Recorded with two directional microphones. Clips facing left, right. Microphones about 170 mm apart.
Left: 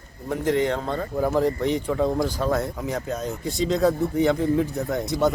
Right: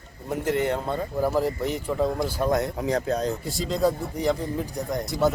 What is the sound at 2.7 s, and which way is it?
Speech, 35° right (ahead or behind).